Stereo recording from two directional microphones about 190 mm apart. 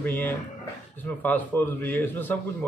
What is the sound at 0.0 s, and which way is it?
A man's voice, 10° left (ahead or behind).